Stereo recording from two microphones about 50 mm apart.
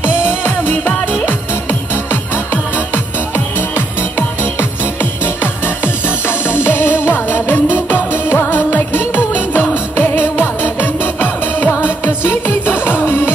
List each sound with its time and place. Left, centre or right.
0.0 s music: left
5.2 s music: left